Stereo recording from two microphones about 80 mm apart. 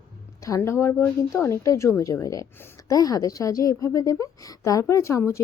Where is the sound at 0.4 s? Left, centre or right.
Left.